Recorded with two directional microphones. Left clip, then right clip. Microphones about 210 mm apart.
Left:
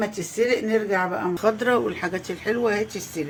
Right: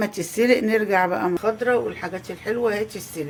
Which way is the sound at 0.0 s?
40° right (ahead or behind).